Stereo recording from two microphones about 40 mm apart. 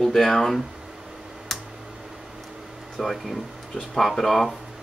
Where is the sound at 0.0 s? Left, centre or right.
Centre.